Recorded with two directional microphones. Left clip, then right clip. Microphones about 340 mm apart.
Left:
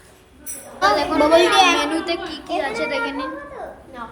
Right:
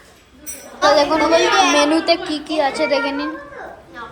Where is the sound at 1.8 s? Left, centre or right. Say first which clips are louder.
Right 7 dB; centre.